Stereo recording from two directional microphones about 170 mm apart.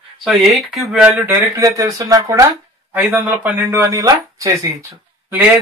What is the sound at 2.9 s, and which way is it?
Speech, 10° right (ahead or behind).